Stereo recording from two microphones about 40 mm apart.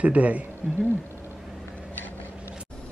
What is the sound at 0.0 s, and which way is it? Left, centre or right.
Speech, right.